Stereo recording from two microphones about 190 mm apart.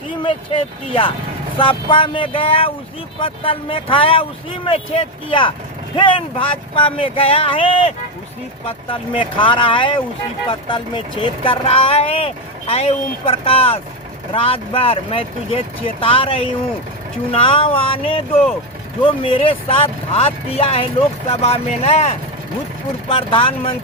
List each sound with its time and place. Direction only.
0.2 s speech: 25° left (ahead or behind)